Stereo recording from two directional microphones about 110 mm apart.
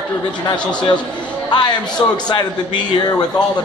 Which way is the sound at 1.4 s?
40° left (ahead or behind).